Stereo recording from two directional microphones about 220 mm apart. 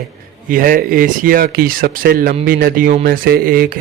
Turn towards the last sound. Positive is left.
turn(degrees=-40)  # may be behind; listen again after turning